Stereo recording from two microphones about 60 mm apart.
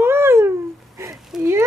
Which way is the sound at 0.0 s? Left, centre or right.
Right.